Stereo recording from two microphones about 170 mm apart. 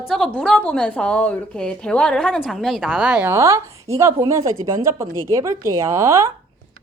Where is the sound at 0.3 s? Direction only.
5° left (ahead or behind); by 6.3 s 15° right (ahead or behind).